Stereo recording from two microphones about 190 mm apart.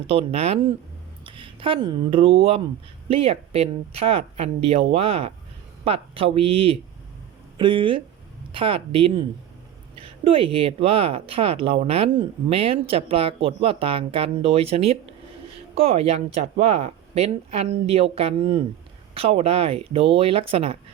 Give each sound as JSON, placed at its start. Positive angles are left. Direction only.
{"t": 0.1, "sound": "speech", "side_deg": -30}